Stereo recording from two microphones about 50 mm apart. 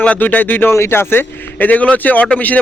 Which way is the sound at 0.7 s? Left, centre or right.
Left.